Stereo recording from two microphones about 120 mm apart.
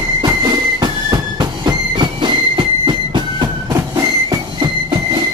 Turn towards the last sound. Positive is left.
turn(degrees=-40)  # may be behind; listen again after turning